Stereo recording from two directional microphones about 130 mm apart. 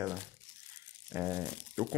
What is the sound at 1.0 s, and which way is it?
Crumpling, 20° right (ahead or behind).